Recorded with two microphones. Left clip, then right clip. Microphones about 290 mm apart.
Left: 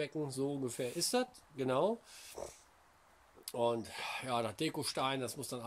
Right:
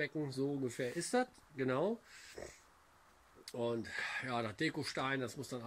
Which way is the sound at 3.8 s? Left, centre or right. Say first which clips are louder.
Right 1 dB; centre.